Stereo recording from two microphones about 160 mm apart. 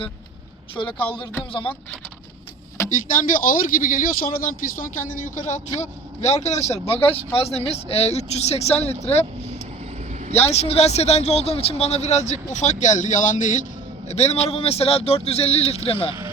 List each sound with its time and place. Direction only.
0.9 s speech: 10° left (ahead or behind)
1.1 s speech: 30° left (ahead or behind)
3.1 s speech: 55° left (ahead or behind); by 9.2 s 40° left (ahead or behind)
10.3 s speech: 40° left (ahead or behind)
14.1 s speech: 40° left (ahead or behind)